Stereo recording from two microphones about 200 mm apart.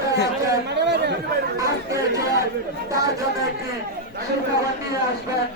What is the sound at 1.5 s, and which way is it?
Chatter, 15° right (ahead or behind).